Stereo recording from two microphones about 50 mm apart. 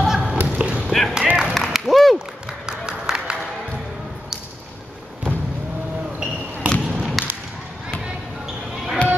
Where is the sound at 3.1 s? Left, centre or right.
Centre.